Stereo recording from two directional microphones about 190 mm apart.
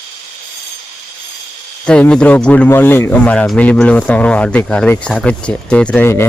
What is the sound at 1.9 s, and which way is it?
Speech, 5° left (ahead or behind).